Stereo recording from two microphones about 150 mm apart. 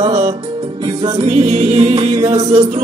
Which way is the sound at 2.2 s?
25° right (ahead or behind).